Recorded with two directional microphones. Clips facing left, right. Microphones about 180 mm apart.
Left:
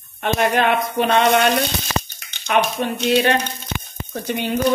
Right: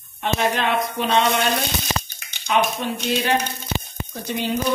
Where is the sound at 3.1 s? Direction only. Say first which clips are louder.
Left 5 dB; 70° left (ahead or behind).